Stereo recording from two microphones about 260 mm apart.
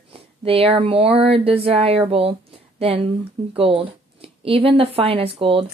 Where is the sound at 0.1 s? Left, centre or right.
Right.